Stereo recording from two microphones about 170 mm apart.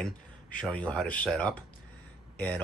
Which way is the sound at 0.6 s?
5° left (ahead or behind).